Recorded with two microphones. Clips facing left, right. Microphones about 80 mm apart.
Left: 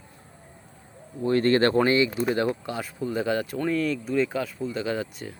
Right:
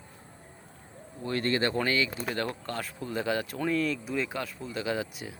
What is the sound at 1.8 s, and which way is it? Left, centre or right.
Speech, left.